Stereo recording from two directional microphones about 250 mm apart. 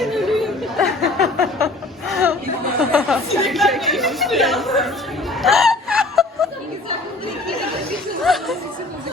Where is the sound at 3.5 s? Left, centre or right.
Centre.